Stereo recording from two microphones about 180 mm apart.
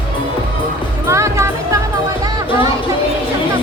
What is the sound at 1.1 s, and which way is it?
Music, 15° right (ahead or behind).